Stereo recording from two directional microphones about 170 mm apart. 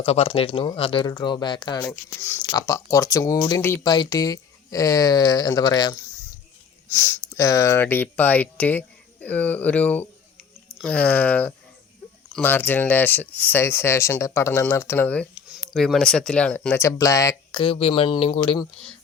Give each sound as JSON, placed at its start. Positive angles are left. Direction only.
{"t": 0.0, "sound": "speech", "side_deg": 35}
{"t": 1.8, "sound": "speech", "side_deg": 10}
{"t": 6.9, "sound": "speech", "side_deg": 10}
{"t": 15.4, "sound": "a sound", "side_deg": -5}
{"t": 15.7, "sound": "speech", "side_deg": 0}
{"t": 17.6, "sound": "speech", "side_deg": 35}